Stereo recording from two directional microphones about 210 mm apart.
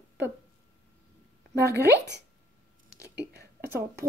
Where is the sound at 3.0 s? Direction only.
55° right (ahead or behind).